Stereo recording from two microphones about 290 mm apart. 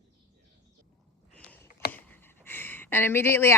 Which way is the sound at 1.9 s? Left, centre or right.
Centre.